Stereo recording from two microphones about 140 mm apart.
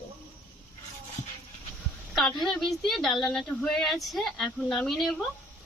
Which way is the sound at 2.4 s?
Centre (ahead or behind).